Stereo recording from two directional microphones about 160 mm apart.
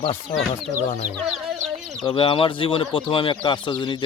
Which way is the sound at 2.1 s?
35° left (ahead or behind).